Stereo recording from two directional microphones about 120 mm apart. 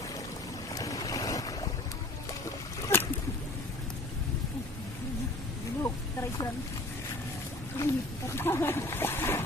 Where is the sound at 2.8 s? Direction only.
20° left (ahead or behind).